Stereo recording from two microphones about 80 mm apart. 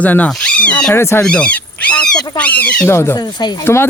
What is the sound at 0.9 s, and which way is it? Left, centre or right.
Speech, left.